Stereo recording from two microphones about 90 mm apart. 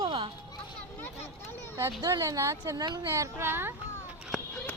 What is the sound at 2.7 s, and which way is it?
Speech, 50° right (ahead or behind).